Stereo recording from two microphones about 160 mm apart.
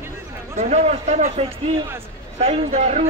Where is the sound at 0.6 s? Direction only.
45° right (ahead or behind).